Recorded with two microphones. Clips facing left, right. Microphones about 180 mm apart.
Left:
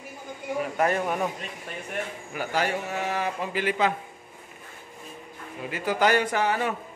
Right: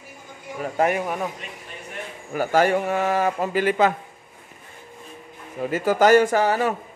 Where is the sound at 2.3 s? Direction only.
50° right (ahead or behind).